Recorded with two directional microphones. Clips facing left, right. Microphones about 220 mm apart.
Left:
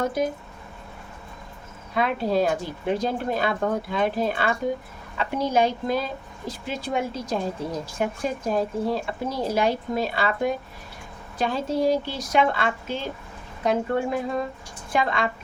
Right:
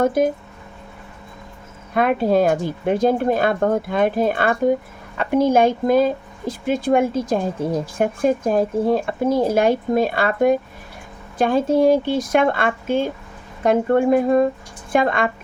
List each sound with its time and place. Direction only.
0.0 s speech: 50° right (ahead or behind)
2.0 s speech: 50° right (ahead or behind)